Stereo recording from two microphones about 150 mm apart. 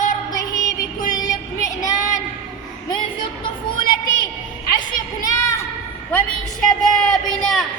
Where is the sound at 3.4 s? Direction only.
30° left (ahead or behind).